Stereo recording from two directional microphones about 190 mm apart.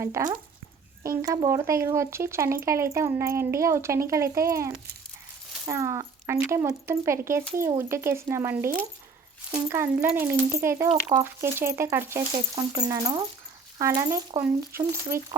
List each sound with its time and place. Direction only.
0.0 s speech: 15° right (ahead or behind)